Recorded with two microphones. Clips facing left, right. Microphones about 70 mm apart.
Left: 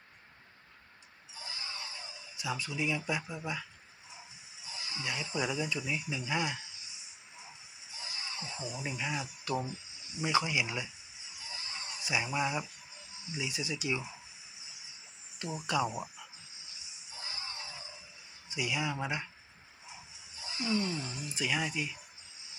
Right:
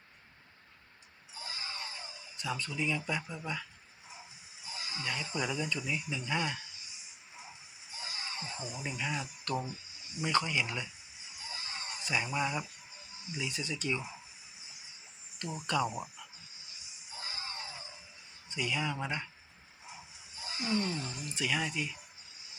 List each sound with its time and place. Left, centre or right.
2.3 s speech: centre
4.6 s a sound: right
5.3 s speech: centre
8.1 s a sound: right
8.7 s speech: centre
11.3 s a sound: right
12.0 s speech: centre
15.4 s speech: centre
17.1 s screaming: right
18.4 s speech: centre
20.3 s a sound: right
20.8 s speech: centre